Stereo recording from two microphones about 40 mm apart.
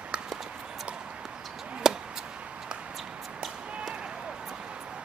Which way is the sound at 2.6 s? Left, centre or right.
Right.